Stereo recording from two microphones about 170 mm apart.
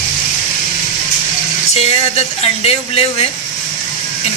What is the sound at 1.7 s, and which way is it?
Speech, 40° left (ahead or behind).